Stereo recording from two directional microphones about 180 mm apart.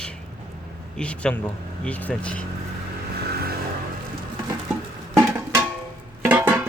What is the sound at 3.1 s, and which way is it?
Vehicle, 60° right (ahead or behind).